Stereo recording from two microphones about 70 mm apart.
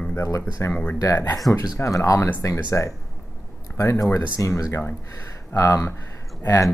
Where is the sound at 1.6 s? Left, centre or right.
Left.